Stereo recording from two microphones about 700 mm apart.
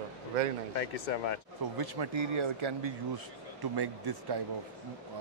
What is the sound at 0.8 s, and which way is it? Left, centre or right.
Speech, left.